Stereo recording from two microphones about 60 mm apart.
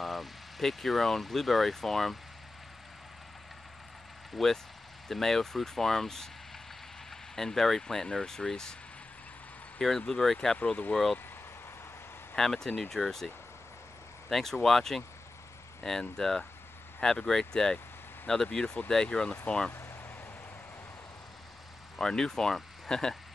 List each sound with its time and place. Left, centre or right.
0.0 s speech: centre
4.4 s speech: centre
9.8 s speech: centre
10.9 s speech: centre
12.4 s speech: centre
14.3 s speech: centre
19.7 s a sound: left
21.9 s speech: centre